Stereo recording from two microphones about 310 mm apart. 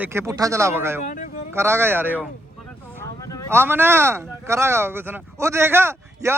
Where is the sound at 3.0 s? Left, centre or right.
Centre.